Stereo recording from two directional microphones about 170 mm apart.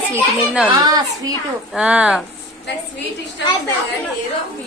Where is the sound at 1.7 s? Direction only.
5° right (ahead or behind).